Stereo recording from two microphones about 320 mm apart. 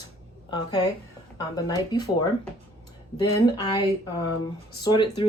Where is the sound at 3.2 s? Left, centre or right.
Centre.